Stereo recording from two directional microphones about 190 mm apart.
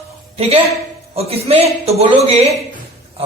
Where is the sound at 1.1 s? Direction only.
30° right (ahead or behind).